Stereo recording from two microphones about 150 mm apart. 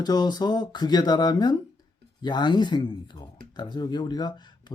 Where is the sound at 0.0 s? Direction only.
25° left (ahead or behind).